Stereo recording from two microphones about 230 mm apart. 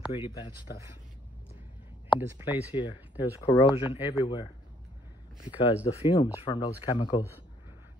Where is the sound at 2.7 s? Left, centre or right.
Left.